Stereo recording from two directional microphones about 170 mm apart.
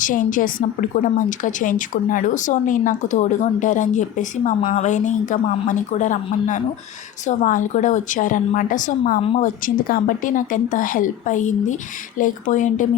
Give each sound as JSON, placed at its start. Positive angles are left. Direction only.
{"t": 0.0, "sound": "a woman's voice", "side_deg": 50}